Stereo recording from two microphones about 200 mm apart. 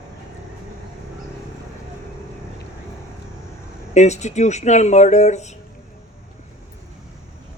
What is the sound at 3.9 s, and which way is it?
Speech, 35° left (ahead or behind).